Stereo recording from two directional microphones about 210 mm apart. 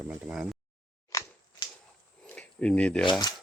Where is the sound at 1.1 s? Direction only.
15° left (ahead or behind).